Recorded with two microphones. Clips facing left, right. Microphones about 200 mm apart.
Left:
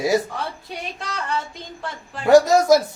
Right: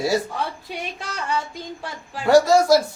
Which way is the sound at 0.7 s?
5° right (ahead or behind).